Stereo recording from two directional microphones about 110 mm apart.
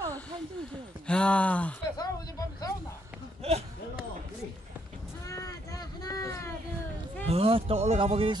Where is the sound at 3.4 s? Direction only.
70° right (ahead or behind).